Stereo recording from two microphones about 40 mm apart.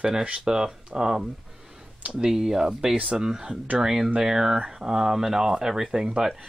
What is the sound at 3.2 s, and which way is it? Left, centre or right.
Speech, centre.